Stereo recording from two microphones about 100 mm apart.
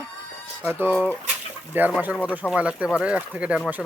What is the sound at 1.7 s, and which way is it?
Speech, 20° right (ahead or behind).